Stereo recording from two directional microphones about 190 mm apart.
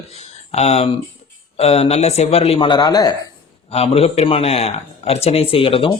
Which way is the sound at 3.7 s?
30° left (ahead or behind).